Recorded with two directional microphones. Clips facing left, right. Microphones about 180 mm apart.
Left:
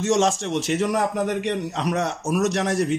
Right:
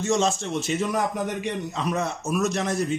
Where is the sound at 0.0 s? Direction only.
90° left.